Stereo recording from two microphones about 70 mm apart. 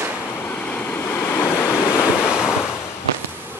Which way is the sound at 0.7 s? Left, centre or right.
Left.